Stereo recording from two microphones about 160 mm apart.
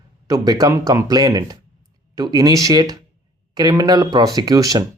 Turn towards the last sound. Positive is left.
turn(degrees=-20)  # may be behind; listen again after turning